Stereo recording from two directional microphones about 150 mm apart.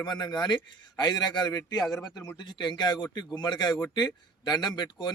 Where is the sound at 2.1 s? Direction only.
25° left (ahead or behind).